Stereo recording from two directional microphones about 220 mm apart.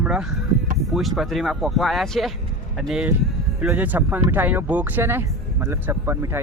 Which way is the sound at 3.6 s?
5° right (ahead or behind).